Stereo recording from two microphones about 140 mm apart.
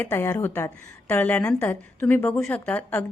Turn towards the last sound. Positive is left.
turn(degrees=15)  # may be behind; listen again after turning